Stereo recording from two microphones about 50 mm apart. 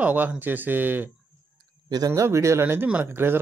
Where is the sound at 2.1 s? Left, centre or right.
Right.